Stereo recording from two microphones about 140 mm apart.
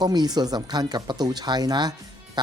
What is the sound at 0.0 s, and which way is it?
Speech, 30° right (ahead or behind).